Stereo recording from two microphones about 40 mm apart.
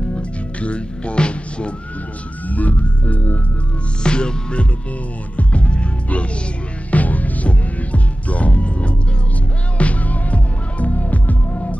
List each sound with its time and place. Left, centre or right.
0.1 s music: left
2.4 s music: left
4.0 s music: left
6.9 s music: left